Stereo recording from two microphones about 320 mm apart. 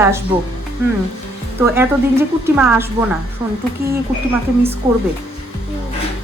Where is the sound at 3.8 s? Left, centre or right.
Right.